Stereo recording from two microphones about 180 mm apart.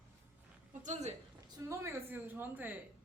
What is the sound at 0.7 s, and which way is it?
Speech, 40° right (ahead or behind).